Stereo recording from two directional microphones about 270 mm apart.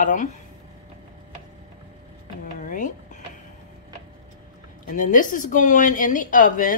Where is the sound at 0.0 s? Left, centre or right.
Left.